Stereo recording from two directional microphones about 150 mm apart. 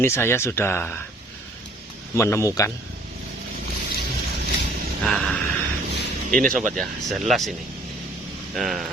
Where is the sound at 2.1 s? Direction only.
20° left (ahead or behind).